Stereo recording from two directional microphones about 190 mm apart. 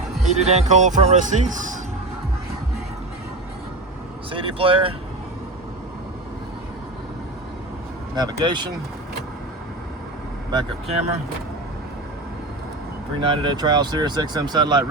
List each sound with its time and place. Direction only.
0.3 s speech: 35° right (ahead or behind)
4.3 s speech: 25° right (ahead or behind)
8.1 s speech: 20° right (ahead or behind)
10.5 s speech: 30° right (ahead or behind)
13.2 s speech: 25° right (ahead or behind)